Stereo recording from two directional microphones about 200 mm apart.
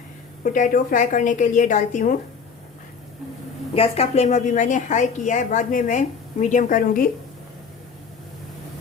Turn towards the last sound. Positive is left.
turn(degrees=45)  # may be behind; listen again after turning